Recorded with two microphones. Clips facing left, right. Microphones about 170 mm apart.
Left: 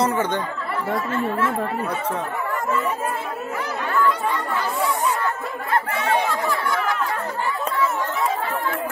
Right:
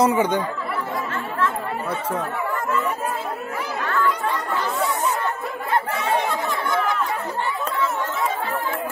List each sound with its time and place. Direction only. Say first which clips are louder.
0.0 s speech: right 3 dB; 10° right (ahead or behind)
6.4 s chatter: even; 20° right (ahead or behind)